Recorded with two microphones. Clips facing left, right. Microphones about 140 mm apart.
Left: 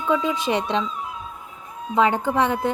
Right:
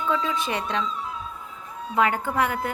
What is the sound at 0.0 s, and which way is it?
Speech, 15° left (ahead or behind).